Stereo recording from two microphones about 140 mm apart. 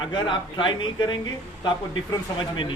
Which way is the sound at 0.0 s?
35° left (ahead or behind).